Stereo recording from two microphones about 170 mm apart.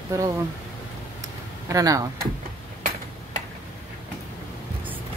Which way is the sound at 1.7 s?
20° right (ahead or behind).